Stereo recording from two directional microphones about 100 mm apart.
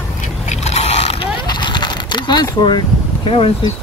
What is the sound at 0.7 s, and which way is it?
Vehicle, 90° left.